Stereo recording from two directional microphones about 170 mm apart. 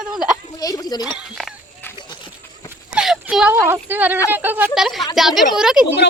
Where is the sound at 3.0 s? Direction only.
5° right (ahead or behind).